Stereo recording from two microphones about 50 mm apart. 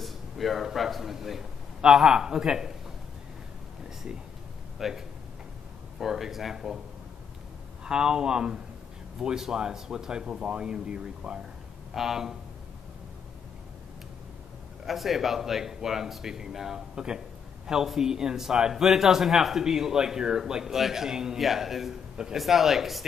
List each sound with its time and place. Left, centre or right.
0.0 s a sound: centre
0.7 s a man's voice: centre
4.7 s a man's voice: centre
7.8 s a man's voice: centre
11.9 s a man's voice: centre
14.9 s a man's voice: centre